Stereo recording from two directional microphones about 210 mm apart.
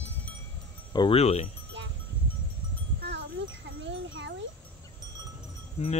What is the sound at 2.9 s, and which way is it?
Wind chime, 55° right (ahead or behind).